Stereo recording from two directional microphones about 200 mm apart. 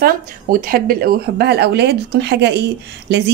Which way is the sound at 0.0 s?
45° right (ahead or behind).